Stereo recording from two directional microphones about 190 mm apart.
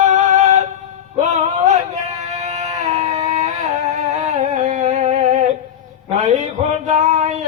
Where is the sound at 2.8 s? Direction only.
35° right (ahead or behind).